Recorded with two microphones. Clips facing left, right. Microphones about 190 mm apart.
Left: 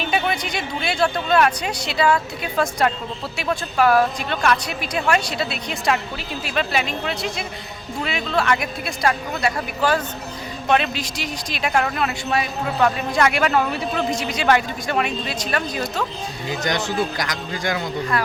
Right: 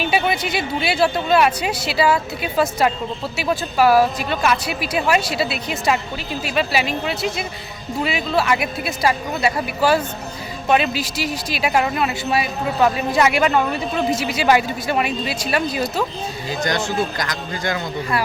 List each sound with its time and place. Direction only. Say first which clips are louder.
0.0 s speech: right 3 dB; 5° right (ahead or behind)
16.5 s speech: right 1 dB; 20° left (ahead or behind)